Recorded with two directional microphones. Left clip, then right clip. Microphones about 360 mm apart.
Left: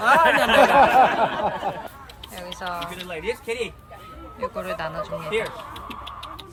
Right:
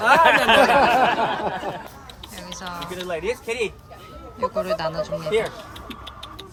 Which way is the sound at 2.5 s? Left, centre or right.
Centre.